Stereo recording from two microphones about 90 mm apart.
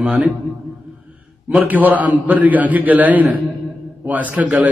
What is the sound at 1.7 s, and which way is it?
Speech, 20° right (ahead or behind).